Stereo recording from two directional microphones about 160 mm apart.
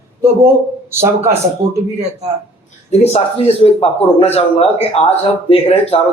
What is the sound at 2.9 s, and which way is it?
Speech, 40° left (ahead or behind).